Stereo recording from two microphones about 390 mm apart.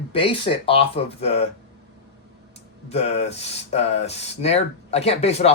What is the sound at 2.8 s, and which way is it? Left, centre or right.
Speech, centre.